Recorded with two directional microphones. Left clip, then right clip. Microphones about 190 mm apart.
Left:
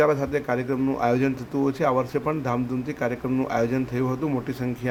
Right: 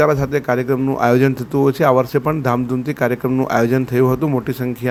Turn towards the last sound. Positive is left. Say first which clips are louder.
# right 8 dB
turn(degrees=-30)  # may be behind; listen again after turning